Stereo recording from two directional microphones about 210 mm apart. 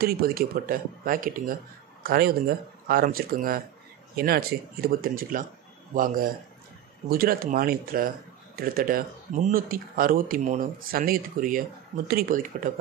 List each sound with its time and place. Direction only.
0.0 s speech: 45° right (ahead or behind)